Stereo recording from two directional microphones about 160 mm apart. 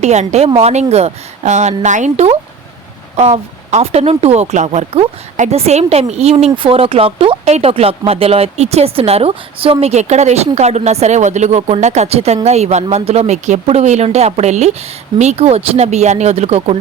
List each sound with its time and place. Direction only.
0.0 s speech: 45° right (ahead or behind)